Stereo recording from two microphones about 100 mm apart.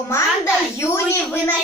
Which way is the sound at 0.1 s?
30° left (ahead or behind).